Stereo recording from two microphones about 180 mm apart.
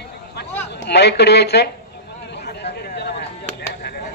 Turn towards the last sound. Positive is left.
turn(degrees=65)  # may be behind; listen again after turning